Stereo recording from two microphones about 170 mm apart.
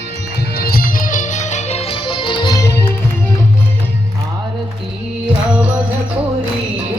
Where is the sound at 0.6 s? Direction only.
60° left (ahead or behind); by 2.8 s 20° left (ahead or behind).